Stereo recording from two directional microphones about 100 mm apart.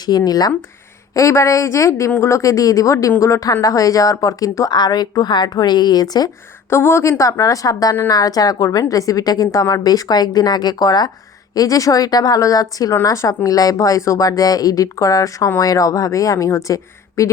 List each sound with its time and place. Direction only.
0.0 s speech: 40° left (ahead or behind)
1.1 s speech: 30° left (ahead or behind)
6.7 s speech: 25° left (ahead or behind)